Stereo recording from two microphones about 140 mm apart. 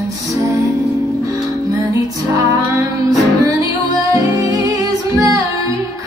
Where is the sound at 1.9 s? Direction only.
25° right (ahead or behind).